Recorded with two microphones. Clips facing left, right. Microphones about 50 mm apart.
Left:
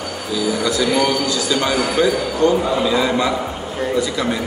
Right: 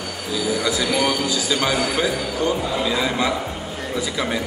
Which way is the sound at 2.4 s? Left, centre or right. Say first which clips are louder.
Left 7 dB; centre.